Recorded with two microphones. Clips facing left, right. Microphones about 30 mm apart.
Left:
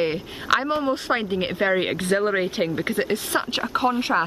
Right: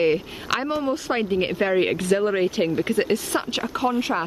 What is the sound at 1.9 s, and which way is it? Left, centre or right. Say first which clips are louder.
Speech: right 1 dB; left.